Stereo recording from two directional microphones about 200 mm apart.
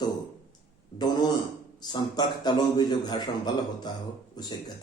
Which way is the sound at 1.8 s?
20° left (ahead or behind).